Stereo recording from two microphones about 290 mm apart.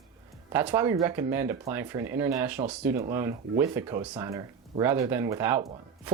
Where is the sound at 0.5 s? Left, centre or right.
Centre.